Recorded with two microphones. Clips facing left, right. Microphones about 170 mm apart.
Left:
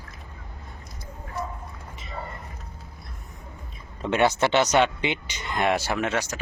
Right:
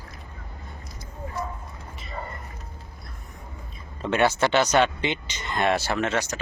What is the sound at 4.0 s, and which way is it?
Speech, 15° left (ahead or behind).